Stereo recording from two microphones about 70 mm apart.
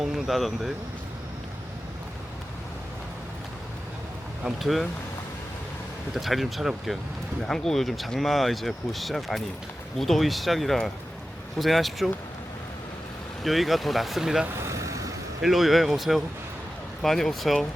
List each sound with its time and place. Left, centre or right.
0.0 s speech: centre
4.4 s speech: centre
6.1 s speech: centre
13.4 s speech: centre
14.7 s vehicle: right
15.4 s speech: centre